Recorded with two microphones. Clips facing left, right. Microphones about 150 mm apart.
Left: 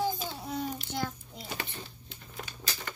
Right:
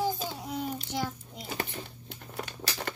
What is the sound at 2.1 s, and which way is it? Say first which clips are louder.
Crumpling: right 5 dB; 65° right (ahead or behind).